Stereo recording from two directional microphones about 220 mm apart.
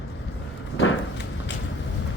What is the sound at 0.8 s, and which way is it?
Walk, 55° left (ahead or behind).